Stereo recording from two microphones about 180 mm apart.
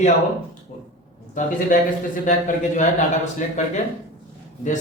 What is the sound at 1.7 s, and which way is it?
Speech, 45° left (ahead or behind).